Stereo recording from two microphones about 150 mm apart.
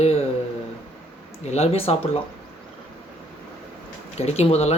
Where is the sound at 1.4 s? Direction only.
45° left (ahead or behind).